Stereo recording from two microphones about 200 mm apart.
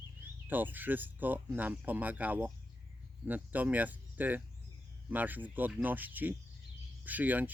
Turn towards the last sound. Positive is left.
turn(degrees=-10)  # may be behind; listen again after turning